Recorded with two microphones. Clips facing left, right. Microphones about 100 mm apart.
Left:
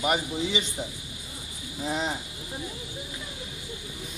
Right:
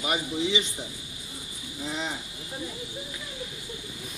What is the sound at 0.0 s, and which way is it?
Speech, 40° left (ahead or behind).